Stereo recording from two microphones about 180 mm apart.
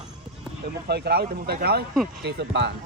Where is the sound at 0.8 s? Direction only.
65° right (ahead or behind).